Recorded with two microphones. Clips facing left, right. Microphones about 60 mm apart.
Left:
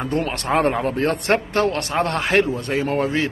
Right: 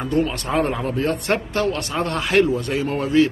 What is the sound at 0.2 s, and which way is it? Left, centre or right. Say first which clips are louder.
A man's voice: left 2 dB; left.